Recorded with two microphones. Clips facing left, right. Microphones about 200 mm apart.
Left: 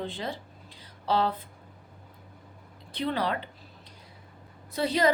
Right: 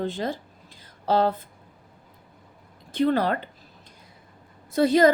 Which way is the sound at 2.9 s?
45° right (ahead or behind).